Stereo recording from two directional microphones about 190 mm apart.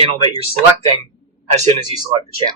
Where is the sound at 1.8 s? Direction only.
20° right (ahead or behind).